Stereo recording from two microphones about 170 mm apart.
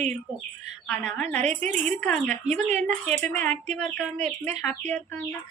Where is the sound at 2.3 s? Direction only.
45° right (ahead or behind).